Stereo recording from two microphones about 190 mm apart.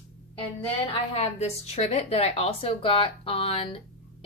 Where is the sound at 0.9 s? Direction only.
30° left (ahead or behind).